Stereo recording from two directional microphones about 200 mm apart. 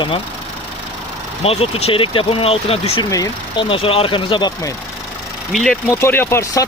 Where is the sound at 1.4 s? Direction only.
30° left (ahead or behind).